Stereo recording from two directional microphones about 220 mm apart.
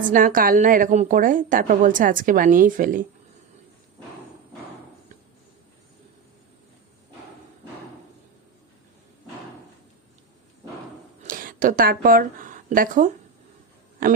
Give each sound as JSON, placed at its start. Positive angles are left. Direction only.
{"t": 0.1, "sound": "a woman's voice", "side_deg": -40}
{"t": 11.2, "sound": "speech", "side_deg": -40}